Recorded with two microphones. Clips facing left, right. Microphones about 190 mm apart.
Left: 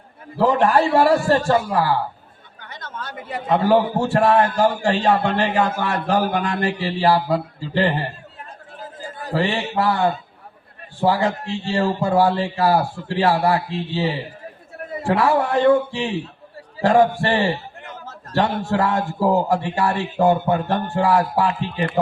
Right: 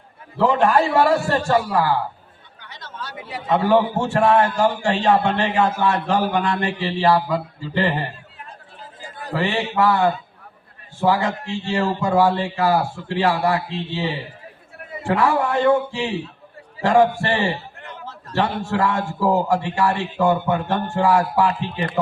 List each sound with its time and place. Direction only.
0.3 s a man's voice: 35° left (ahead or behind)
2.6 s chatter: 50° left (ahead or behind)
3.5 s a man's voice: 35° left (ahead or behind)
9.3 s a man's voice: 35° left (ahead or behind)
21.4 s a man's voice: 35° right (ahead or behind)